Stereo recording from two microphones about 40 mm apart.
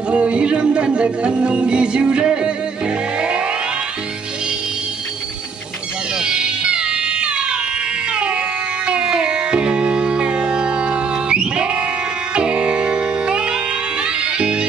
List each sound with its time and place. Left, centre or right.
0.1 s music: right
6.1 s music: right